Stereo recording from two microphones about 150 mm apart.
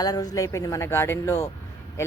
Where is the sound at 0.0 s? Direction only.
25° left (ahead or behind).